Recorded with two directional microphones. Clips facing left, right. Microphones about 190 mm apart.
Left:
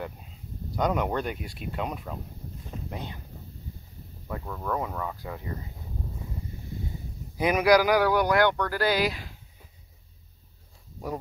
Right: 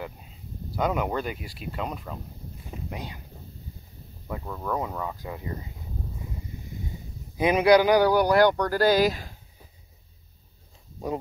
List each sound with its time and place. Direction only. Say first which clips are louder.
0.0 s speech: even; 5° right (ahead or behind)
2.9 s speech: even; 10° right (ahead or behind)
4.3 s speech: right 1 dB; 5° right (ahead or behind)
7.3 s speech: right 2 dB; 25° right (ahead or behind); by 9.3 s 45° right (ahead or behind)